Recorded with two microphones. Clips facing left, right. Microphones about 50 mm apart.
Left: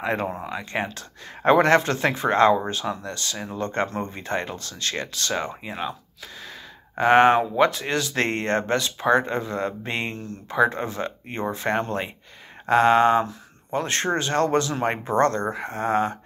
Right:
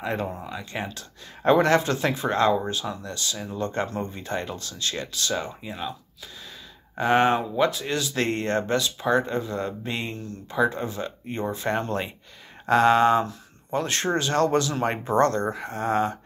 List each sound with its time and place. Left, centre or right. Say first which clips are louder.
0.0 s speech: left 3 dB; left
7.0 s speech: left 5 dB; left